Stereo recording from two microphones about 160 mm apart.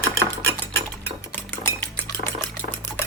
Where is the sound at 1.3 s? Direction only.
15° left (ahead or behind).